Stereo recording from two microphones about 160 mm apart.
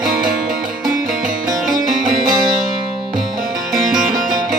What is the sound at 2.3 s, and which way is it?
Music, 25° right (ahead or behind).